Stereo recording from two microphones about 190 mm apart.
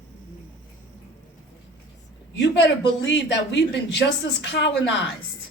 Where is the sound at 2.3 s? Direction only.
65° left (ahead or behind).